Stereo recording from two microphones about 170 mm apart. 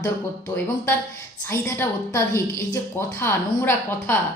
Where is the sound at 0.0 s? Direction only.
20° left (ahead or behind).